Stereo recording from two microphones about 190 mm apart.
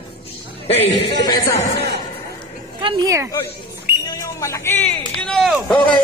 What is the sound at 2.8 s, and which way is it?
Speech, 25° right (ahead or behind).